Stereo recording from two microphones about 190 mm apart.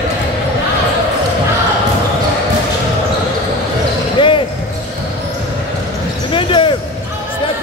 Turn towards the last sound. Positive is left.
turn(degrees=25)  # may be behind; listen again after turning